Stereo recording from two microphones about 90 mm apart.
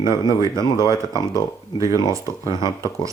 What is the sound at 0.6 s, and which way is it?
Speech, 55° left (ahead or behind).